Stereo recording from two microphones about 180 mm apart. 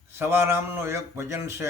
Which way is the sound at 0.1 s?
15° right (ahead or behind).